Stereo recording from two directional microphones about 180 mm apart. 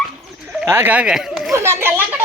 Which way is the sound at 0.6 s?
10° right (ahead or behind).